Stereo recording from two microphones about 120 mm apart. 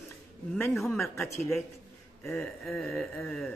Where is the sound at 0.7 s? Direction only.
Centre (ahead or behind).